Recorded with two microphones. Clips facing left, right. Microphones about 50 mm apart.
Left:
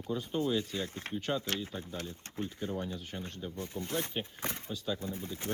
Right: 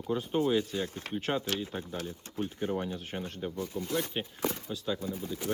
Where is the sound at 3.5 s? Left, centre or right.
Left.